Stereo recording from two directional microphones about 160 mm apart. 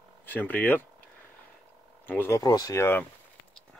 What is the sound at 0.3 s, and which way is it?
Speech, 10° left (ahead or behind).